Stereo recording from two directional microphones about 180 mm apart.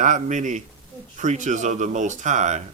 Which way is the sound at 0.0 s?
45° right (ahead or behind).